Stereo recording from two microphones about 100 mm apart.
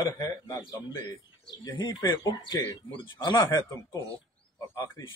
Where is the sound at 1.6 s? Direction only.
40° left (ahead or behind).